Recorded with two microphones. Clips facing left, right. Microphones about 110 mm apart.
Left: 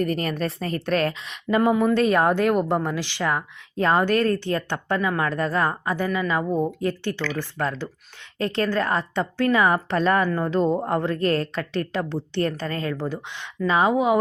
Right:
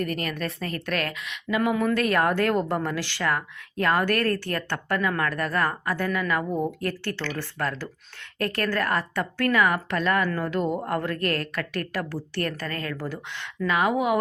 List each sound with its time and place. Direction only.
0.0 s a woman's voice: 35° left (ahead or behind)
1.7 s speech: 25° left (ahead or behind)